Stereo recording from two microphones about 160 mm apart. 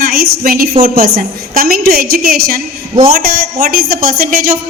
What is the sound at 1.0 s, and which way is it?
A woman's voice, 70° right (ahead or behind).